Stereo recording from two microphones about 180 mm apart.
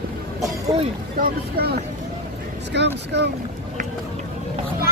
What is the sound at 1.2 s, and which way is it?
Speech, 60° right (ahead or behind).